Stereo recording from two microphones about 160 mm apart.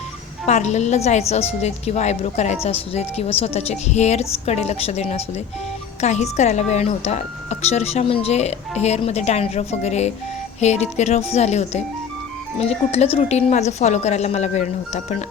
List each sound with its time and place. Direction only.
0.4 s a woman's voice: 45° left (ahead or behind)